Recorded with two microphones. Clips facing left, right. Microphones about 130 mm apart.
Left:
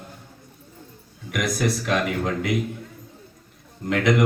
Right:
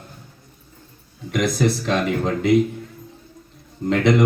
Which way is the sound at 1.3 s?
25° right (ahead or behind).